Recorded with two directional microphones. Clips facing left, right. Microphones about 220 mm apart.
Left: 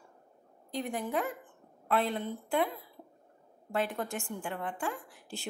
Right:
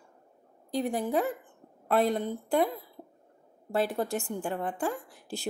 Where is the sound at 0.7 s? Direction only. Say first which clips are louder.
Right 5 dB; 35° right (ahead or behind).